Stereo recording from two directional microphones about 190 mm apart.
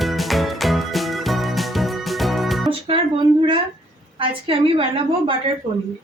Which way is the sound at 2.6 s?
30° right (ahead or behind).